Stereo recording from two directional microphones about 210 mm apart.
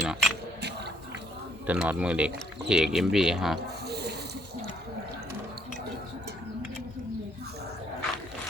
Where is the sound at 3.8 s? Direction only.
50° right (ahead or behind).